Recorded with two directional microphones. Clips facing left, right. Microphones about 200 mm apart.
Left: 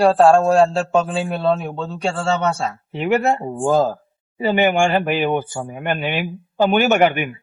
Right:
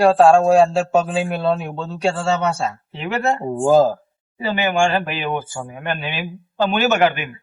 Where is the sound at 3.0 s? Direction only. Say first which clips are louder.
Left 4 dB; 15° left (ahead or behind).